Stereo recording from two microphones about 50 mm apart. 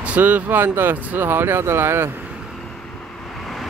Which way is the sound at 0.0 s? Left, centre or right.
Right.